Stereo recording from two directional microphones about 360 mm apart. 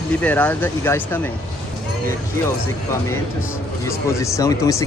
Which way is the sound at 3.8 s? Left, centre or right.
Centre.